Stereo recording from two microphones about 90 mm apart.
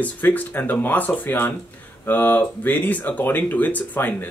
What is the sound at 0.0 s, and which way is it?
Speech, 20° left (ahead or behind).